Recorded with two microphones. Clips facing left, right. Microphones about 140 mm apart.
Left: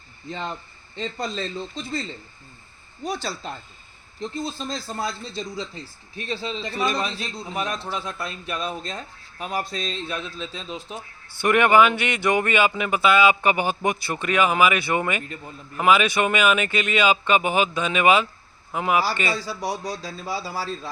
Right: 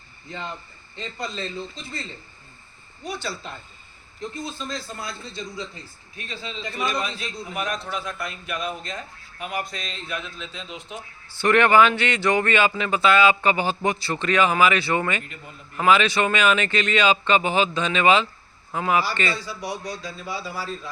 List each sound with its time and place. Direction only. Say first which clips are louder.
0.3 s a man's voice: left 3 dB; 35° left (ahead or behind)
3.0 s a man's voice: left 2 dB; 40° left (ahead or behind)
11.3 s speech: even; 10° left (ahead or behind)
19.4 s a man's voice: left 3 dB; 40° left (ahead or behind)